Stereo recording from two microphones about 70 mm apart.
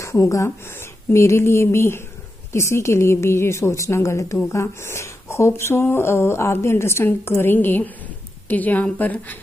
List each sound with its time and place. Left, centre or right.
0.0 s a woman's voice: left